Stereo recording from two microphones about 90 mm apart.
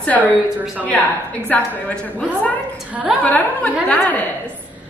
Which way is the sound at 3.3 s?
15° left (ahead or behind).